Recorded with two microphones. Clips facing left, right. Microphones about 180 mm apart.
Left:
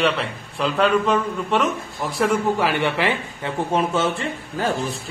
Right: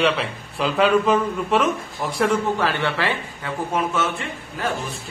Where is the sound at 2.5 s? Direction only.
15° left (ahead or behind).